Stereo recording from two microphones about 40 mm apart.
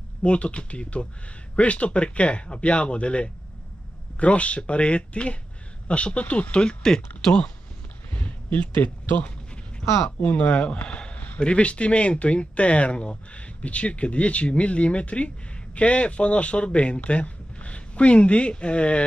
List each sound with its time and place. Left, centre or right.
0.2 s a man's voice: left
6.6 s speech: centre
8.1 s a sound: left
10.2 s a man's voice: left